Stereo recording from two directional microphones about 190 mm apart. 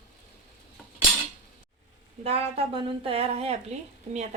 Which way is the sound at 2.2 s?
30° right (ahead or behind).